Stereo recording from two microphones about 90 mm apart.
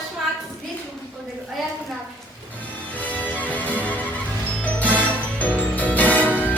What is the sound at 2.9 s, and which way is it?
Music, 15° left (ahead or behind).